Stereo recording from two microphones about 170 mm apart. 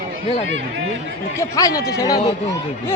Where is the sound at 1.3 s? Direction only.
20° left (ahead or behind).